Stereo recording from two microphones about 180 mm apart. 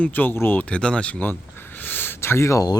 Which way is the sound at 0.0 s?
10° left (ahead or behind).